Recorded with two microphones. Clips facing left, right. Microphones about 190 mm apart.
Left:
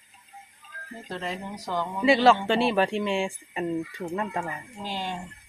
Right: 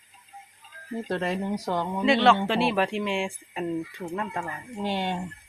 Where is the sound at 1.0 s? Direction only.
65° right (ahead or behind).